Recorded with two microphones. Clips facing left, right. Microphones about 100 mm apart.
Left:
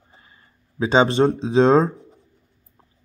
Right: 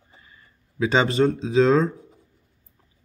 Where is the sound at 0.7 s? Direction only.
25° left (ahead or behind).